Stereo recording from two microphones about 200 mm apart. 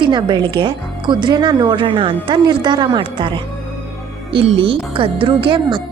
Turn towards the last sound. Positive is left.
turn(degrees=-25)  # may be behind; listen again after turning